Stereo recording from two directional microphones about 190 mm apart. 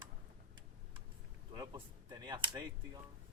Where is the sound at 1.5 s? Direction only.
20° right (ahead or behind).